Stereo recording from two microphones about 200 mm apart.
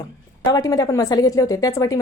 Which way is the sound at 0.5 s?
20° left (ahead or behind).